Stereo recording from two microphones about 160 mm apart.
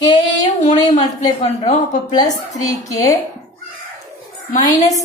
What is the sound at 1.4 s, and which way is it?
Speech, 45° left (ahead or behind).